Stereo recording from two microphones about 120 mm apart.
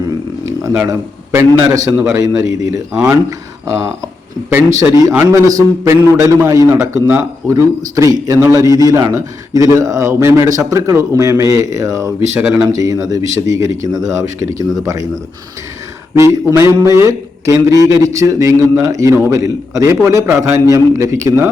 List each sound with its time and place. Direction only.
0.9 s a man's voice: 25° right (ahead or behind)
16.1 s a man's voice: 25° right (ahead or behind)